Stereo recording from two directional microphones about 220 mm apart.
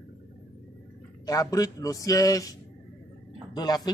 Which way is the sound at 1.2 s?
15° left (ahead or behind).